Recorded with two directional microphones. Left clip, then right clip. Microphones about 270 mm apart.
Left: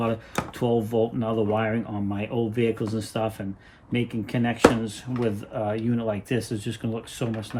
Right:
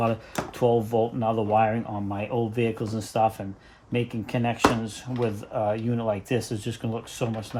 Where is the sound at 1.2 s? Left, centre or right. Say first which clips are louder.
Right 3 dB; centre.